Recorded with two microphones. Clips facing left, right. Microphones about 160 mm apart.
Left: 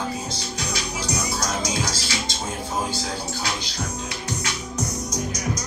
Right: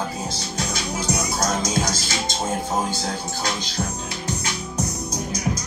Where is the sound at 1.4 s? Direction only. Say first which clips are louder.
Right 3 dB; 45° right (ahead or behind).